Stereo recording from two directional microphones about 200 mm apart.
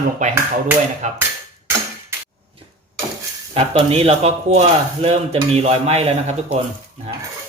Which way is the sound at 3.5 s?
30° right (ahead or behind).